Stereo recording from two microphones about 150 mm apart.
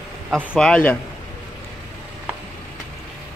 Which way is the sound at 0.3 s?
5° left (ahead or behind).